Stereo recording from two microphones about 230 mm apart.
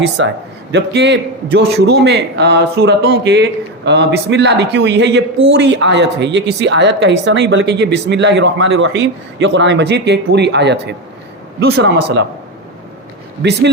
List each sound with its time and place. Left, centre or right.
0.2 s a woman's voice: right
13.4 s a woman's voice: right